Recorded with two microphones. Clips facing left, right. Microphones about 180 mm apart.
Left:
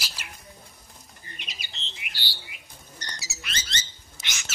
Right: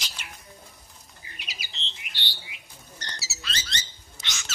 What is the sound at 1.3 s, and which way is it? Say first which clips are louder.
Bird: right 1 dB; 5° right (ahead or behind).